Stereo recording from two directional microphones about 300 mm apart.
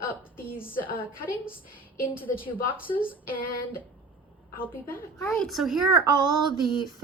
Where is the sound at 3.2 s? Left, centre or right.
Left.